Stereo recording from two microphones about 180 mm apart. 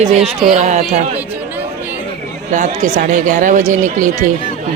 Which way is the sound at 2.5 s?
45° right (ahead or behind).